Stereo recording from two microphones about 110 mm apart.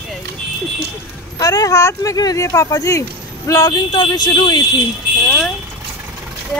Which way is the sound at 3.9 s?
40° left (ahead or behind).